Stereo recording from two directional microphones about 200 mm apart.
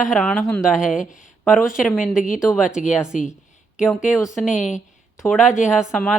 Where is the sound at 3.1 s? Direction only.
40° left (ahead or behind).